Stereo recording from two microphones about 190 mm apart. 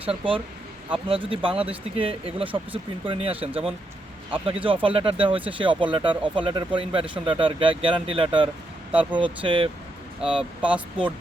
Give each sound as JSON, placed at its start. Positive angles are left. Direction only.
{"t": 0.0, "sound": "speech", "side_deg": -30}
{"t": 10.6, "sound": "speech", "side_deg": -5}